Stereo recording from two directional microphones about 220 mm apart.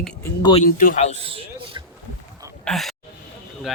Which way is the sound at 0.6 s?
40° left (ahead or behind).